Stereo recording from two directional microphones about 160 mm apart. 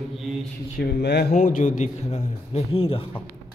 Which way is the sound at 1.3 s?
55° left (ahead or behind).